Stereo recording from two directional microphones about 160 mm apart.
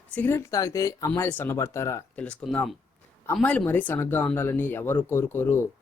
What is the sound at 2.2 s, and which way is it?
Speech, 5° left (ahead or behind).